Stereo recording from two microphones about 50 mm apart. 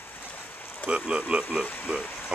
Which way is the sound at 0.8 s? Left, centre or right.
Left.